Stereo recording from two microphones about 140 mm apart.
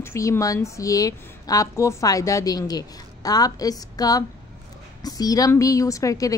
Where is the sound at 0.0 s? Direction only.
20° left (ahead or behind).